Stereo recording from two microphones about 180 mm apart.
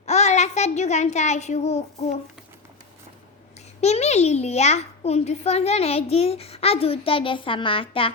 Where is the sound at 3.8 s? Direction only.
35° left (ahead or behind).